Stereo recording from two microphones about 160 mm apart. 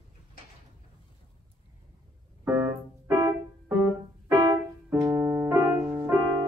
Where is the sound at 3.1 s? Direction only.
25° right (ahead or behind).